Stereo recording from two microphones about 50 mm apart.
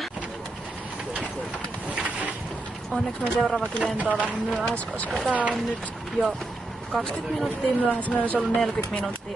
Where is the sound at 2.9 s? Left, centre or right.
Centre.